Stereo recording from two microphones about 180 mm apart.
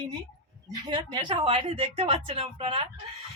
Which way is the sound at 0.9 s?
25° right (ahead or behind).